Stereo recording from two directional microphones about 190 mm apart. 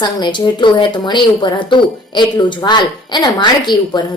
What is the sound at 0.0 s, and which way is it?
A woman's voice, 25° left (ahead or behind).